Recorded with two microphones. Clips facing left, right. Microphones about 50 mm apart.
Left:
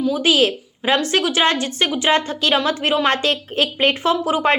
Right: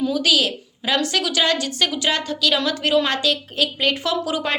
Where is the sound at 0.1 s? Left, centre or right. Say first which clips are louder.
Left 3 dB; left.